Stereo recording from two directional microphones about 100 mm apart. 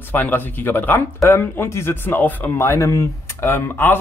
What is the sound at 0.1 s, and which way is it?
Speech, 20° left (ahead or behind).